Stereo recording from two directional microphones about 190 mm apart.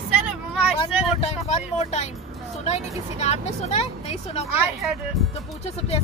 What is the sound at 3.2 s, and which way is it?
Speech, 35° left (ahead or behind).